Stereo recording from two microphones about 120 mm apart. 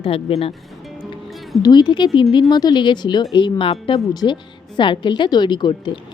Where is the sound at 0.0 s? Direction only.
50° left (ahead or behind).